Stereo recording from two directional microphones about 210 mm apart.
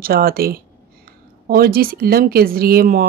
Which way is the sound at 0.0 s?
45° right (ahead or behind).